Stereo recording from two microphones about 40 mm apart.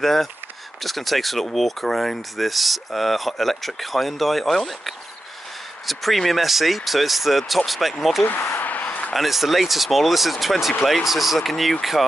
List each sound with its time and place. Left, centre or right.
0.0 s speech: centre
8.5 s a sound: left
9.1 s speech: centre